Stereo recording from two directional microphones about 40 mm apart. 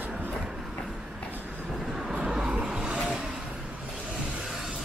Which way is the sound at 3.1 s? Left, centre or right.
Centre.